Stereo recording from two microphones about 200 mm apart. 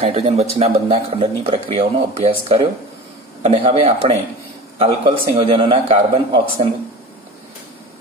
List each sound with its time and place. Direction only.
0.0 s speech: 30° right (ahead or behind)